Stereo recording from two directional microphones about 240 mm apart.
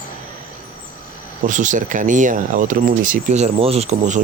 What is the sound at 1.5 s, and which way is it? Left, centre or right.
Speech, right.